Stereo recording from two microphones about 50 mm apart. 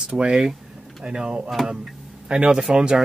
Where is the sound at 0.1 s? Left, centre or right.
Centre.